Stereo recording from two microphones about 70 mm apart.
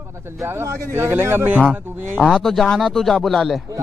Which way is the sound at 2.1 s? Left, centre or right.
Centre.